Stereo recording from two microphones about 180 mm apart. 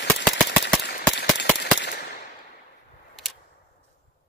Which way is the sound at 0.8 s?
65° left (ahead or behind).